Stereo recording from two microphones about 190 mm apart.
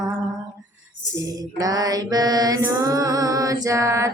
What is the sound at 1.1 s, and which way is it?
Mantra, 20° right (ahead or behind).